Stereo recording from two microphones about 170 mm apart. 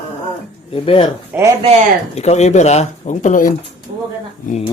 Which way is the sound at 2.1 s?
40° left (ahead or behind).